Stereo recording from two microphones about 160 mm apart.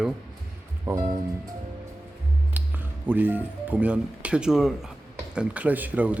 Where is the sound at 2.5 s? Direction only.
10° right (ahead or behind).